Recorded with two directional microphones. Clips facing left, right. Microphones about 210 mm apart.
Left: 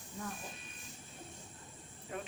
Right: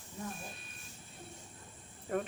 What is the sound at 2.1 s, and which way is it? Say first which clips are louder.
Cricket: right 8 dB; 50° right (ahead or behind).